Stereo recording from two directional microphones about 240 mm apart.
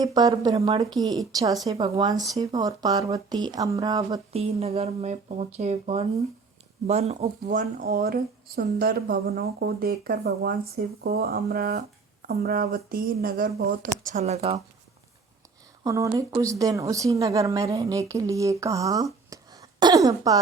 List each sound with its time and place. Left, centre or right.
0.0 s a woman's voice: centre
4.3 s speech: right
15.8 s a woman's voice: centre